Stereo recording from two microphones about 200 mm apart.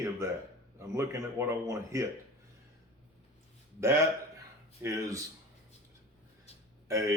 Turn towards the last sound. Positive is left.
turn(degrees=-15)  # may be behind; listen again after turning